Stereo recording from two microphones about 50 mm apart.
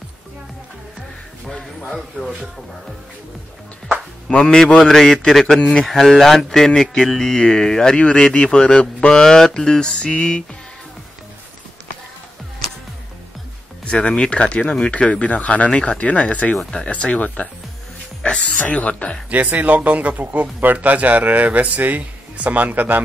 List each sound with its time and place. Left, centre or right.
2.0 s speech: centre
4.3 s speech: centre
5.6 s speech: centre
5.9 s speech: centre
13.8 s speech: centre
19.3 s speech: right